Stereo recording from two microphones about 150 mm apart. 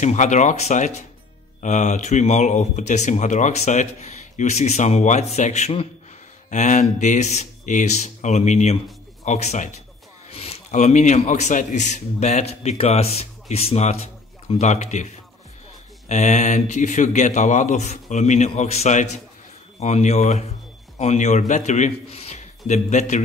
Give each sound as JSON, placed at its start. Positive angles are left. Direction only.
{"t": 0.0, "sound": "a man's voice", "side_deg": 55}
{"t": 16.1, "sound": "a man's voice", "side_deg": 50}